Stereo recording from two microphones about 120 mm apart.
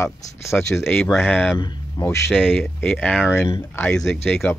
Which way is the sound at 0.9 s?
5° left (ahead or behind).